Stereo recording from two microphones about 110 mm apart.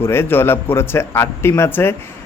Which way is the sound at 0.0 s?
20° left (ahead or behind).